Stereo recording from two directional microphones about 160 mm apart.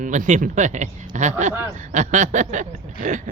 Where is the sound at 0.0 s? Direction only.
50° right (ahead or behind).